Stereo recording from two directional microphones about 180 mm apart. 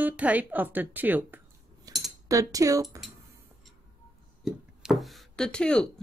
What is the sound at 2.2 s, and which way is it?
Speech, 20° right (ahead or behind).